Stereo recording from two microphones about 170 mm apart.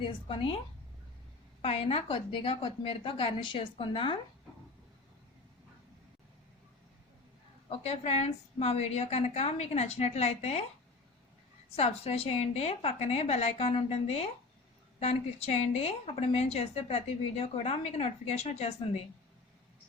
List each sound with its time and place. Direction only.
0.0 s a woman's voice: 30° left (ahead or behind)
1.6 s a woman's voice: 35° left (ahead or behind)
7.7 s a woman's voice: 40° left (ahead or behind)
11.8 s a woman's voice: 35° left (ahead or behind)